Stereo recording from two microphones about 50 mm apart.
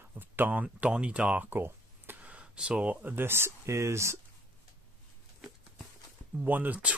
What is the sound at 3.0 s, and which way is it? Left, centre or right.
Speech, right.